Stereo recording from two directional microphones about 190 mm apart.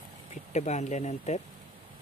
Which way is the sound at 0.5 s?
35° left (ahead or behind).